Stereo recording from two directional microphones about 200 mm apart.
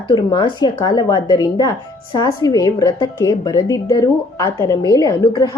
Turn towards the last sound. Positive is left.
turn(degrees=20)  # may be behind; listen again after turning